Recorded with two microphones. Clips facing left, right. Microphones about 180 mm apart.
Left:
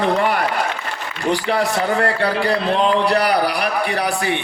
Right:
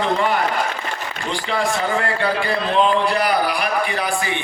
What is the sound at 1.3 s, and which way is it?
A man's voice, 70° left (ahead or behind).